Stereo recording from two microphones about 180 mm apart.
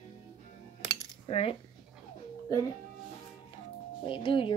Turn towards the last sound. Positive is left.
turn(degrees=25)  # may be behind; listen again after turning